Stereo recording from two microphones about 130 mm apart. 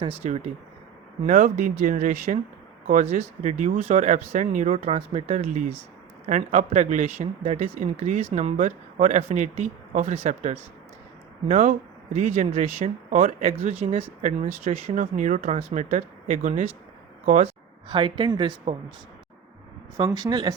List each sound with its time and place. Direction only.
0.2 s speech: 60° right (ahead or behind)
1.3 s speech: 90° right
2.9 s speech: 55° right (ahead or behind)
4.7 s speech: 50° right (ahead or behind)
5.3 s speech: 65° right (ahead or behind)
7.2 s speech: 55° right (ahead or behind)
11.5 s speech: 90° right; by 15.0 s 55° right (ahead or behind)
15.1 s speech: 70° right (ahead or behind); by 16.6 s 85° right
17.8 s speech: 40° right (ahead or behind)
20.1 s speech: 30° right (ahead or behind)